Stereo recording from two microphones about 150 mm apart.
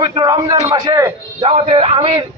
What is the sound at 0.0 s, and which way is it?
A man's voice, 30° right (ahead or behind).